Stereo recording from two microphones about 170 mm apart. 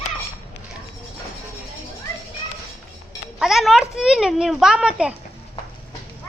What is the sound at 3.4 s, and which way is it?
A child's voice, centre (ahead or behind).